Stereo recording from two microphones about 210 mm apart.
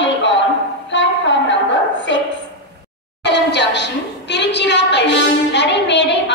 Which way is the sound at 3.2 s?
55° left (ahead or behind).